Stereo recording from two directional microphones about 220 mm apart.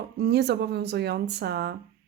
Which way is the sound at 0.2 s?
50° right (ahead or behind).